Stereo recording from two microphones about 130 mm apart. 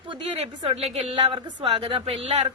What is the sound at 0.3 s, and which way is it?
A woman's voice, 50° right (ahead or behind).